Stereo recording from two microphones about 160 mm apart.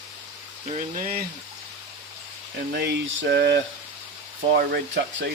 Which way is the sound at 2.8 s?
90° right.